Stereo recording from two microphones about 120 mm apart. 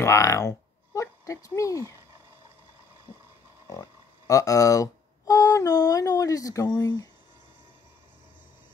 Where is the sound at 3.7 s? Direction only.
25° left (ahead or behind).